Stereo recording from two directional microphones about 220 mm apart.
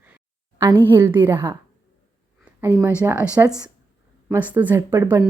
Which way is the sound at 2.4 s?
10° right (ahead or behind).